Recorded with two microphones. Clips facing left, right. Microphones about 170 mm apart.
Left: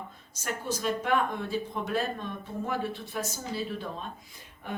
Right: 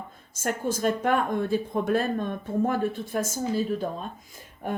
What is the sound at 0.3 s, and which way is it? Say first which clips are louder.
Speech: right 6 dB; 50° right (ahead or behind).